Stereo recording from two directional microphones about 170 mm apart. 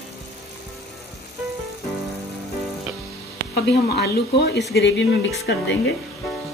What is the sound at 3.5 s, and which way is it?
Speech, 75° left (ahead or behind).